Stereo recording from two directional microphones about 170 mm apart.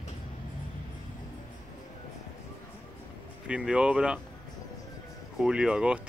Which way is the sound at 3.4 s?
5° right (ahead or behind).